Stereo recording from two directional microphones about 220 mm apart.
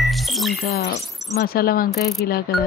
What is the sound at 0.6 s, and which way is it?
A woman's voice, 45° left (ahead or behind).